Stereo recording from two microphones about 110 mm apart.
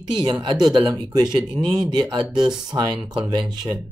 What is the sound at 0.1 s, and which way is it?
Speech, 50° right (ahead or behind).